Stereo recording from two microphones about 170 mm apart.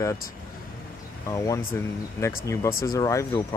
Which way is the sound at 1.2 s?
20° left (ahead or behind).